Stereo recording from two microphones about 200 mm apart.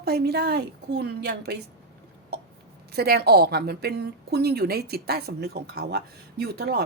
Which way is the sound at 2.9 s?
50° right (ahead or behind).